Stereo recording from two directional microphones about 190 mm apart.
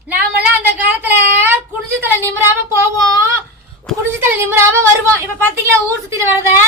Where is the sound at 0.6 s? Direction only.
10° right (ahead or behind).